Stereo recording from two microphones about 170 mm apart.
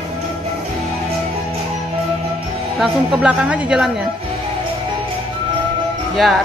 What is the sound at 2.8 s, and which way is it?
Speech, 5° right (ahead or behind).